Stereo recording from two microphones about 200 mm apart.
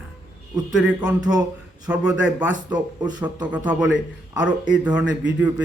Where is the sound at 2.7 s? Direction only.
20° right (ahead or behind).